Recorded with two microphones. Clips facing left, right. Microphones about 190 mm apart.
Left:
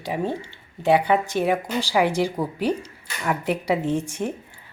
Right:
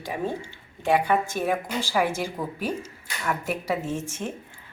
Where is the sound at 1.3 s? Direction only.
15° left (ahead or behind).